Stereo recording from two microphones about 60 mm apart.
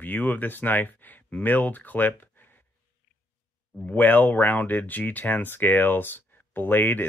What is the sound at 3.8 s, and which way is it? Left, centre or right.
Speech, left.